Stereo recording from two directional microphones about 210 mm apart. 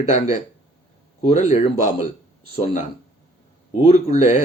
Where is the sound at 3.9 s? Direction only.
35° left (ahead or behind).